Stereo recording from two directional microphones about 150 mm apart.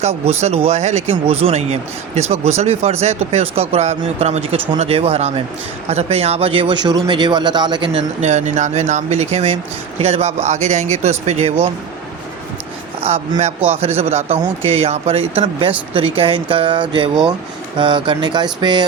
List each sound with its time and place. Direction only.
0.0 s speech: 45° right (ahead or behind)
8.2 s speech: 50° right (ahead or behind)
13.0 s speech: 40° right (ahead or behind)